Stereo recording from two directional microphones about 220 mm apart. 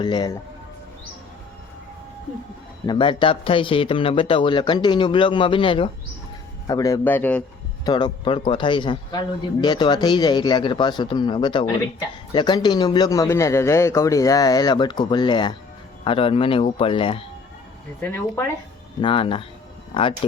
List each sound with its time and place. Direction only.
0.0 s a man's voice: 20° left (ahead or behind)
2.8 s a man's voice: 20° left (ahead or behind)
7.9 s a man's voice: 20° left (ahead or behind)
18.0 s speech: 10° left (ahead or behind)
19.0 s a man's voice: 25° left (ahead or behind)